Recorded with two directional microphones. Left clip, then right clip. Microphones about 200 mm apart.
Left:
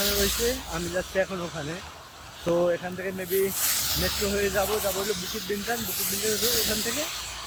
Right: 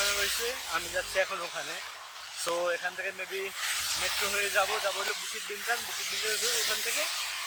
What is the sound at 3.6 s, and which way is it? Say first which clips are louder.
Speech: left 3 dB; 50° left (ahead or behind).